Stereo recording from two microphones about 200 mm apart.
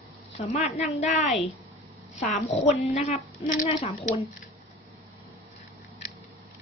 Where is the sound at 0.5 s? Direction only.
30° left (ahead or behind).